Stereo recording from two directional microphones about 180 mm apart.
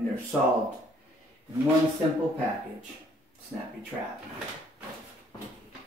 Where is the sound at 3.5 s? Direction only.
10° right (ahead or behind).